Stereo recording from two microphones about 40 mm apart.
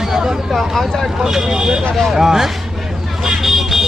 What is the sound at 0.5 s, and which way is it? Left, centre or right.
Speech, centre.